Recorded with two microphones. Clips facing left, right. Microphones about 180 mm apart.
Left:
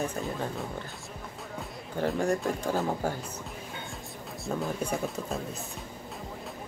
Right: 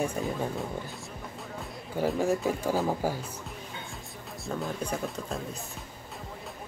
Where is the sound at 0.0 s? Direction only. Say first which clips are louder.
Right 2 dB; 10° right (ahead or behind).